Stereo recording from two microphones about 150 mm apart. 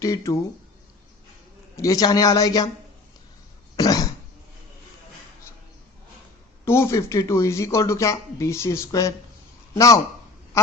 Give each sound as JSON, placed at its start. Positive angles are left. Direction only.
{"t": 0.0, "sound": "speech", "side_deg": 20}
{"t": 1.7, "sound": "speech", "side_deg": 20}
{"t": 3.8, "sound": "cough", "side_deg": 25}
{"t": 6.7, "sound": "speech", "side_deg": 15}
{"t": 10.5, "sound": "quack", "side_deg": 20}